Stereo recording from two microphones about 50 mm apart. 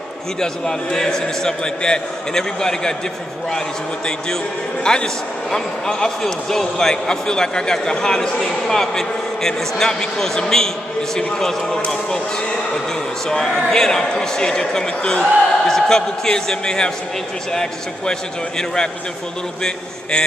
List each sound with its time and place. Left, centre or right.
0.4 s a man's voice: centre
4.8 s a man's voice: centre
13.3 s a man's voice: centre
19.6 s a man's voice: centre